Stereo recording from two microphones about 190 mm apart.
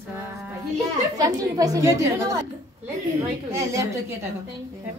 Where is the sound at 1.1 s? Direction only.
20° right (ahead or behind).